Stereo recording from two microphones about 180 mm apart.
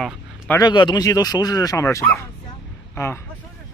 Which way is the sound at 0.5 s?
25° left (ahead or behind).